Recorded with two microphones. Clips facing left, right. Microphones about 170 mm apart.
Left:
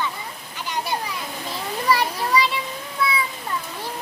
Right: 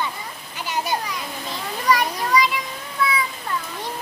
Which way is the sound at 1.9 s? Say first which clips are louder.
Right 1 dB; 30° left (ahead or behind).